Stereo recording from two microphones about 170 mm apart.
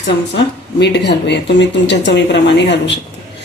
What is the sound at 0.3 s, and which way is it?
Speech, 90° left.